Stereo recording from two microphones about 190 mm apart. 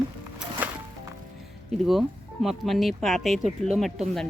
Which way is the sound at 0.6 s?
10° right (ahead or behind).